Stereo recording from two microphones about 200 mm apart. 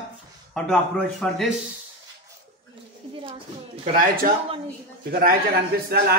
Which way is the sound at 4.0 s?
45° right (ahead or behind).